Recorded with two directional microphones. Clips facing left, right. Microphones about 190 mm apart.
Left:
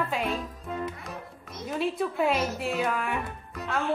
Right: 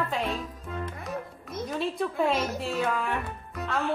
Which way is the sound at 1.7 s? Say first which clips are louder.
Left 2 dB; 5° left (ahead or behind).